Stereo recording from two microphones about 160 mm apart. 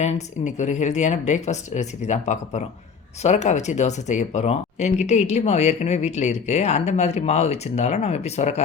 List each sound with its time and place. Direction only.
0.0 s speech: 45° left (ahead or behind)